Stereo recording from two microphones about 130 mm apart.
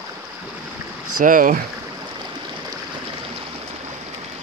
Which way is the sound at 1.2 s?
90° right.